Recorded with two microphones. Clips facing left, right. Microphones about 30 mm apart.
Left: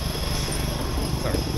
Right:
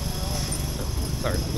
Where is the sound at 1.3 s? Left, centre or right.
Left.